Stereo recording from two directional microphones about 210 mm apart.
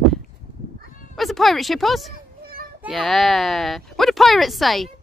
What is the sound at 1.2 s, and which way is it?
Speech, centre (ahead or behind).